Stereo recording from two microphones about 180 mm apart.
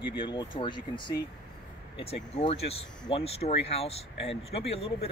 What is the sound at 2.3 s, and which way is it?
Speech, 35° left (ahead or behind).